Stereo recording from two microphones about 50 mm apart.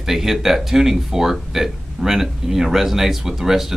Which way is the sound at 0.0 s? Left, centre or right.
Centre.